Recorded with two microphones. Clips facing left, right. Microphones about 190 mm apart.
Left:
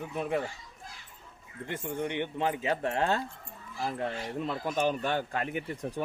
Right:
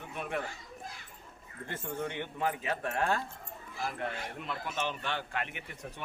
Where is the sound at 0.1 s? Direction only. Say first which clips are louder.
Left 5 dB; 30° left (ahead or behind).